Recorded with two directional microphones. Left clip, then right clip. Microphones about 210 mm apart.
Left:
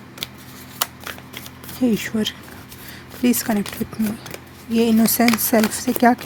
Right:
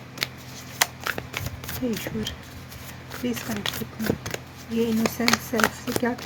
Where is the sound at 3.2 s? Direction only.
50° left (ahead or behind).